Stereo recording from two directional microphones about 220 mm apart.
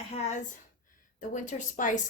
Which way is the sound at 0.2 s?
30° left (ahead or behind).